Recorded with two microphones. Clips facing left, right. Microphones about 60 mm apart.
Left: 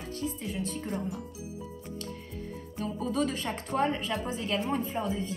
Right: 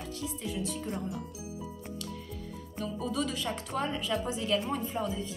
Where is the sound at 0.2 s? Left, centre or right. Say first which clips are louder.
Left 2 dB; left.